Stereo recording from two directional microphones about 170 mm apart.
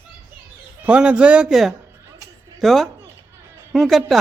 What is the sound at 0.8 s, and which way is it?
Speech, 5° right (ahead or behind).